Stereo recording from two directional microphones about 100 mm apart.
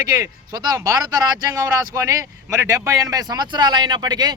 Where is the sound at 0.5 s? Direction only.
40° right (ahead or behind).